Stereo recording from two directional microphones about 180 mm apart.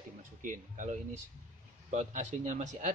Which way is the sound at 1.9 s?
40° right (ahead or behind).